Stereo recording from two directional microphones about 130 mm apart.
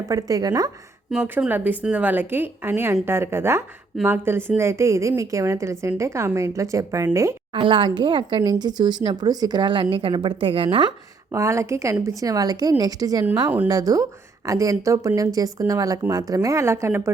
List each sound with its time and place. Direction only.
0.1 s a woman's voice: 25° right (ahead or behind)
1.1 s a woman's voice: 5° right (ahead or behind)
7.5 s a woman's voice: 40° right (ahead or behind)
11.3 s a woman's voice: 25° right (ahead or behind)